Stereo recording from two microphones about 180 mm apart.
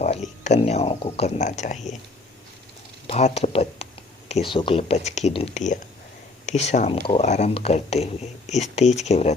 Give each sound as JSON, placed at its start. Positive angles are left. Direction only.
{"t": 0.0, "sound": "speech", "side_deg": 40}
{"t": 3.1, "sound": "speech", "side_deg": 40}